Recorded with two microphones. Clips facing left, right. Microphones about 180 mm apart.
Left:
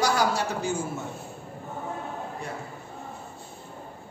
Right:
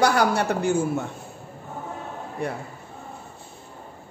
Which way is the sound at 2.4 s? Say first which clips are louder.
Right 12 dB; 60° right (ahead or behind).